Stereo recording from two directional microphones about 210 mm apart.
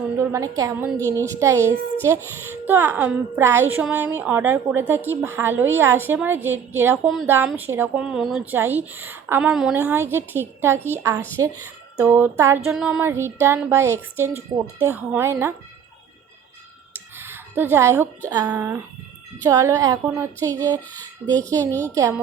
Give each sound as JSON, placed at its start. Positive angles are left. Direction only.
{"t": 0.2, "sound": "a woman's voice", "side_deg": -15}
{"t": 17.2, "sound": "a woman's voice", "side_deg": -10}